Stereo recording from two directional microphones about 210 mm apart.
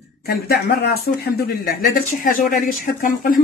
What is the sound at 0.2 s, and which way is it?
Speech, 45° left (ahead or behind).